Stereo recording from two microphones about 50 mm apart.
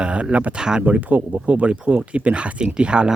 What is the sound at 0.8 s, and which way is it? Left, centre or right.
Speech, right.